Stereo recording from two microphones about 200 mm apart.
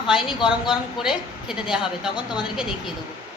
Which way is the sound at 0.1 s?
Centre (ahead or behind).